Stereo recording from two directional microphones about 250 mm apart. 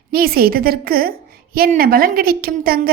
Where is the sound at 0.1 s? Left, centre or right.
Right.